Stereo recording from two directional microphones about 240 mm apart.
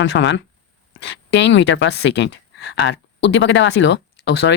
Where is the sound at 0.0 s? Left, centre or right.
Left.